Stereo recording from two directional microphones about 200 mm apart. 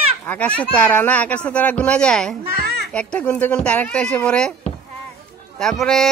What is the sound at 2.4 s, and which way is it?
Babbling, 50° right (ahead or behind).